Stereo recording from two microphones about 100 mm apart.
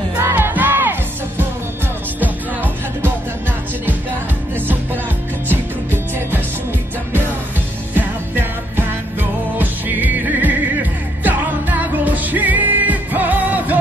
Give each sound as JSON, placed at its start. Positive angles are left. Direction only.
{"t": 0.2, "sound": "music", "side_deg": -20}
{"t": 2.1, "sound": "music", "side_deg": -20}
{"t": 5.5, "sound": "music", "side_deg": -20}
{"t": 7.9, "sound": "music", "side_deg": -20}